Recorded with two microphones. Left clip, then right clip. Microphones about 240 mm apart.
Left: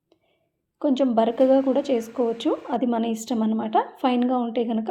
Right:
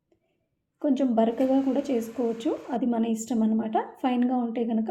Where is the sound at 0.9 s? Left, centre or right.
Centre.